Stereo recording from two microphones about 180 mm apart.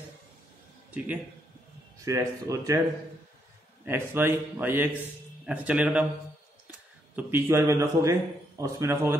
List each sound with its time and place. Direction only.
0.9 s a man's voice: 5° right (ahead or behind)
2.0 s a man's voice: 20° right (ahead or behind)
3.8 s a man's voice: 10° right (ahead or behind)
7.2 s a man's voice: 10° right (ahead or behind)